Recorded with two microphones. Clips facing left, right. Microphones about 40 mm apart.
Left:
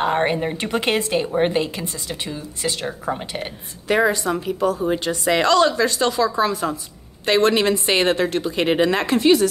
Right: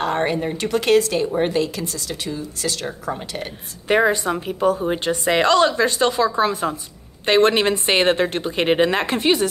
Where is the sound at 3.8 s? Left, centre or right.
Right.